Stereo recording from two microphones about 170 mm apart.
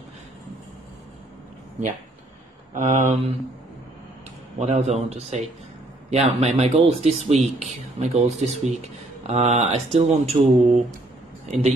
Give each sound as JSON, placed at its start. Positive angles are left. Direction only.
{"t": 2.7, "sound": "speech", "side_deg": -50}
{"t": 4.6, "sound": "speech", "side_deg": -40}